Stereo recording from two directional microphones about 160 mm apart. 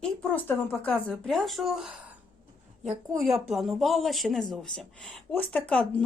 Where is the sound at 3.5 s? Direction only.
Centre (ahead or behind).